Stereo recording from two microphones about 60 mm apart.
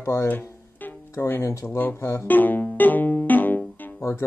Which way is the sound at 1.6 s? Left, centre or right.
Left.